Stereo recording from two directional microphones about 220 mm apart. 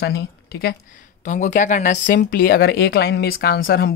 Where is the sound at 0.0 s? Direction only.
45° left (ahead or behind).